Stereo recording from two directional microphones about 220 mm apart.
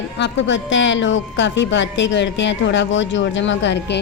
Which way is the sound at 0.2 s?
55° left (ahead or behind).